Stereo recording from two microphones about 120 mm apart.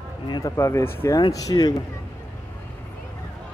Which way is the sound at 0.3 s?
25° left (ahead or behind).